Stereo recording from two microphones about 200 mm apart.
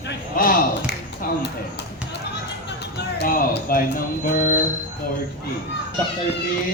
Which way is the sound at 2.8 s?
55° left (ahead or behind).